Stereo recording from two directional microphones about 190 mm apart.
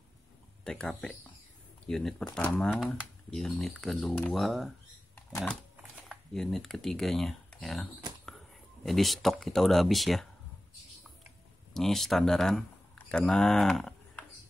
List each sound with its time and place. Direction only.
0.7 s speech: 5° left (ahead or behind)
5.3 s dog: 5° left (ahead or behind)
5.8 s speech: centre (ahead or behind)
11.7 s speech: centre (ahead or behind)